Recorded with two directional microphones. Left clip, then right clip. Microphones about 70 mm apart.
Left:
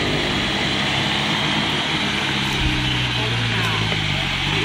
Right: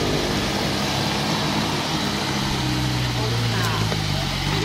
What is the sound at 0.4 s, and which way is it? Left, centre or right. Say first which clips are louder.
Vehicle: left 3 dB; centre.